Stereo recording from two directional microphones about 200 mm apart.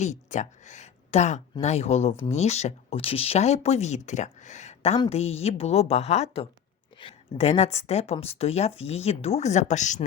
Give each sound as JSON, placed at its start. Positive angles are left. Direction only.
{"t": 0.0, "sound": "speech", "side_deg": 35}